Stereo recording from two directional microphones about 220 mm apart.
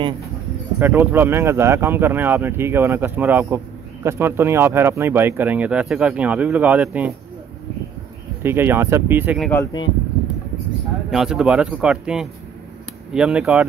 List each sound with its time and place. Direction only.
0.7 s speech: 10° right (ahead or behind)
8.4 s speech: 10° right (ahead or behind)
9.4 s speech: 10° left (ahead or behind)
11.1 s speech: centre (ahead or behind)